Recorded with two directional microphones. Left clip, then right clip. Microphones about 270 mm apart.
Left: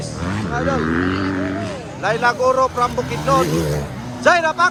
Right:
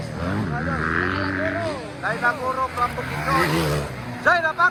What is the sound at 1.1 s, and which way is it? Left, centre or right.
Vehicle, left.